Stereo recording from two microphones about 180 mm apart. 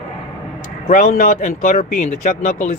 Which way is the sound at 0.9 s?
50° left (ahead or behind).